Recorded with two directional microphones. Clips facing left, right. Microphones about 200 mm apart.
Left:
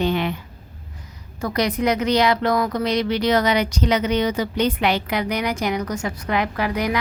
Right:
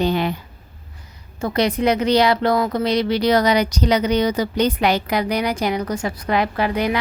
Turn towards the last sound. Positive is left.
turn(degrees=-30)  # may be behind; listen again after turning